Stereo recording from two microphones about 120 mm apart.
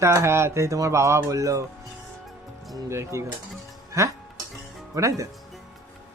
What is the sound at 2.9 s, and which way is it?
A man's voice, 25° right (ahead or behind).